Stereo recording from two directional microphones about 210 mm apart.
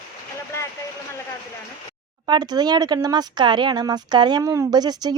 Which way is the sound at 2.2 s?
20° right (ahead or behind).